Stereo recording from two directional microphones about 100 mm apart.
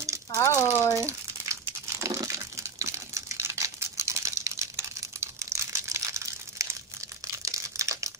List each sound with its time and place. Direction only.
0.3 s rattle: 30° left (ahead or behind)
0.9 s crumpling: 30° right (ahead or behind)